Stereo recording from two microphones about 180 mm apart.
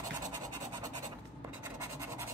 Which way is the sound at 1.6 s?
15° right (ahead or behind).